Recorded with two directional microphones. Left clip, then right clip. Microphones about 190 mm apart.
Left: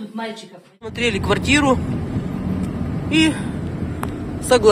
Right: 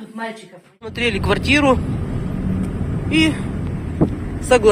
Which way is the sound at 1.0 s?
15° right (ahead or behind).